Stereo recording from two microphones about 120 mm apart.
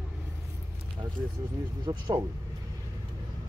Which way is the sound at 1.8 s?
40° right (ahead or behind).